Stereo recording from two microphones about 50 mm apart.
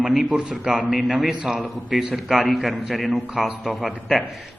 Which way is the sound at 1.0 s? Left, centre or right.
Centre.